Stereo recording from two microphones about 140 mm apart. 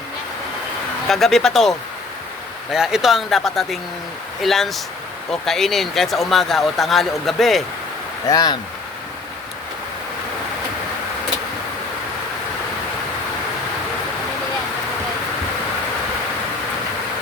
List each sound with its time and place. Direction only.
1.0 s speech: centre (ahead or behind)
2.7 s speech: 5° right (ahead or behind)
8.3 s speech: 30° left (ahead or behind)